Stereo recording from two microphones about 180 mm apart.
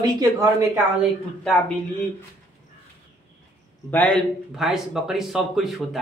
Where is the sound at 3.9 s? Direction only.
10° left (ahead or behind).